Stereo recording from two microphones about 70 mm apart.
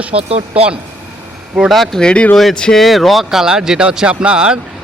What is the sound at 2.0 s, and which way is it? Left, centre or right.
Speech, centre.